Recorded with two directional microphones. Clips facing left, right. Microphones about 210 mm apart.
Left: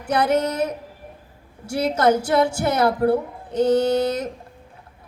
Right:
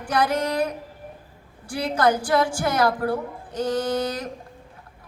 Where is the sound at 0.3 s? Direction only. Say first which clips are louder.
Left 2 dB; 25° left (ahead or behind).